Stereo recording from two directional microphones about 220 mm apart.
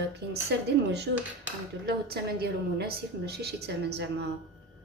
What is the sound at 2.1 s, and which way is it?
A woman's voice, 45° right (ahead or behind).